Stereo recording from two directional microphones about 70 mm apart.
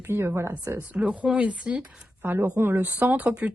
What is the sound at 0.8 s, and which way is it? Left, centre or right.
Speech, centre.